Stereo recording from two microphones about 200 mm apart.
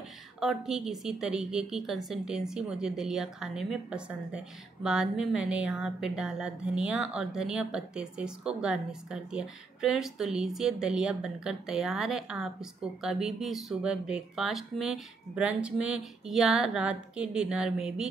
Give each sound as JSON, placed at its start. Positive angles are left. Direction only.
{"t": 0.4, "sound": "speech", "side_deg": 0}